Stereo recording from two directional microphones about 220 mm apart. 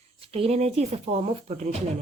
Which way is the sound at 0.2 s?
25° right (ahead or behind).